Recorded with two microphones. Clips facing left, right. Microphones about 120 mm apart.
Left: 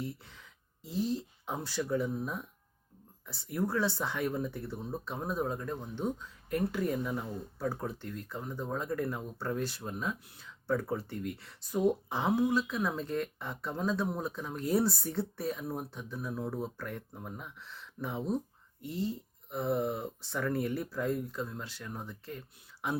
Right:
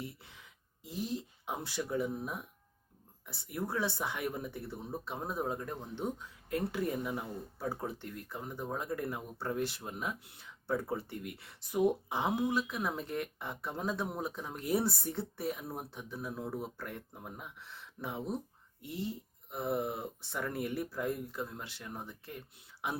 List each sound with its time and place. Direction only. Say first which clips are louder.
0.9 s speech: left 5 dB; 15° right (ahead or behind)
18.9 s speech: left 4 dB; 25° left (ahead or behind)
19.5 s speech: left 3 dB; 15° right (ahead or behind)